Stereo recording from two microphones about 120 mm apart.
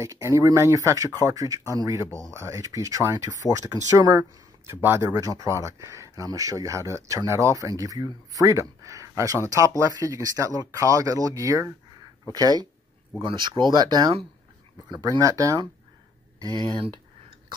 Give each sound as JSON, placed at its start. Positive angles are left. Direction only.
{"t": 0.0, "sound": "speech", "side_deg": -25}
{"t": 4.8, "sound": "speech", "side_deg": -20}